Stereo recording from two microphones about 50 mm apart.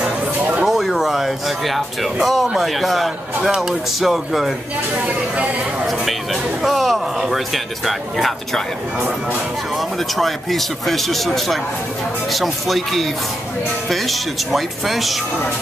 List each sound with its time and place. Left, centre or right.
0.4 s a sound: right
0.7 s music: centre
2.4 s speech: centre
6.6 s speech: centre
9.8 s speech: centre